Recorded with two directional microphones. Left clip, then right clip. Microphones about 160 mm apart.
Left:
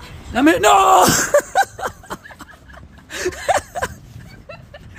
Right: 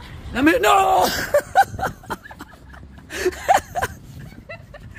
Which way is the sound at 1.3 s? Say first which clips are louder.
Left 1 dB; 20° left (ahead or behind).